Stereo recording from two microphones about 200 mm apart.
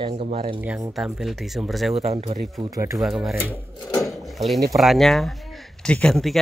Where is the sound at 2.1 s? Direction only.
40° right (ahead or behind).